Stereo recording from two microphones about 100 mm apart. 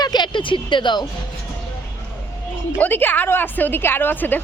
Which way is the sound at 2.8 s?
20° left (ahead or behind).